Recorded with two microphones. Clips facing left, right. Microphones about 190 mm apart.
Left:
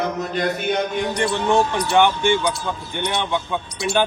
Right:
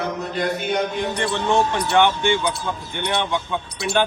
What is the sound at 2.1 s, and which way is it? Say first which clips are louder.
Speech: left 1 dB; 15° right (ahead or behind).